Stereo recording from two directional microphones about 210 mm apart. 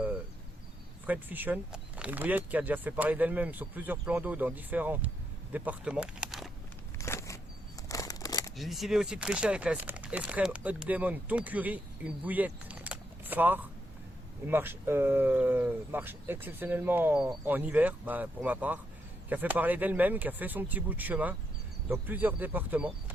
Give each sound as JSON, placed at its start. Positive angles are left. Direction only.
{"t": 1.0, "sound": "speech", "side_deg": -10}
{"t": 7.0, "sound": "a sound", "side_deg": 15}
{"t": 8.5, "sound": "speech", "side_deg": 0}